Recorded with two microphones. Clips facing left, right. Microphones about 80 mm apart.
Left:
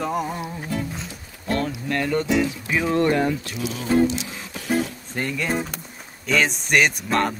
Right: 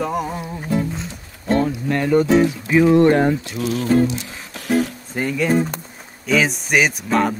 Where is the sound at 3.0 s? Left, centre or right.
Right.